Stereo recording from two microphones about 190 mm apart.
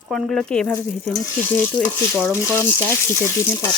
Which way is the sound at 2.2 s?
10° left (ahead or behind).